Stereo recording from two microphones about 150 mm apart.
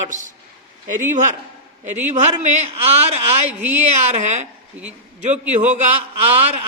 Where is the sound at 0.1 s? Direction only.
55° right (ahead or behind).